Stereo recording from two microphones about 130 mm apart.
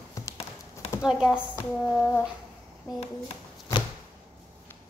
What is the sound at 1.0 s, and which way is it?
Speech, 5° right (ahead or behind).